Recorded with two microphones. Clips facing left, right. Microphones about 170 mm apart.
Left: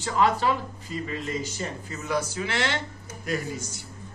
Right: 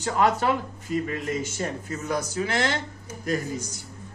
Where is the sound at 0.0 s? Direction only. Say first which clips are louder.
Right 1 dB; 45° right (ahead or behind).